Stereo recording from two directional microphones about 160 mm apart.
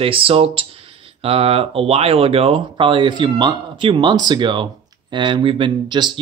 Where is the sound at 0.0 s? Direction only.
35° right (ahead or behind).